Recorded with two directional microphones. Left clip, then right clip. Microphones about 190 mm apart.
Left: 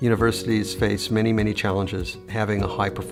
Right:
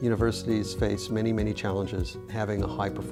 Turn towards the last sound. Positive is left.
turn(degrees=-45)  # may be behind; listen again after turning